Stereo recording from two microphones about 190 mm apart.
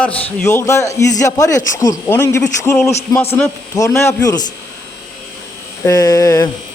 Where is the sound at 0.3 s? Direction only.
15° left (ahead or behind).